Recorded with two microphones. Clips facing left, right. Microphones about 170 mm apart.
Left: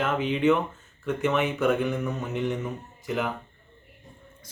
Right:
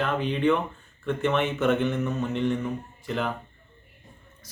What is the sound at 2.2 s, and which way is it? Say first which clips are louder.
Speech: right 3 dB; 15° left (ahead or behind).